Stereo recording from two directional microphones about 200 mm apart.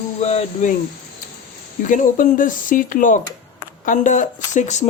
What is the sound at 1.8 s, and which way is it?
Speech, 40° left (ahead or behind).